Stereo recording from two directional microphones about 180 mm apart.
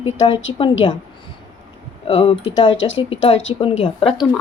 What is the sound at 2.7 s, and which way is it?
Speech, 90° left.